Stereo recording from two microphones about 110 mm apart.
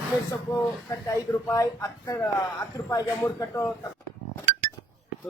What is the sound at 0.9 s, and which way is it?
A man's voice, 30° left (ahead or behind).